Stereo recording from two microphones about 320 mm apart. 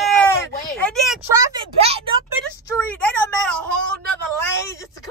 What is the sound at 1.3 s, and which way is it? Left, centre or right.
Speech, centre.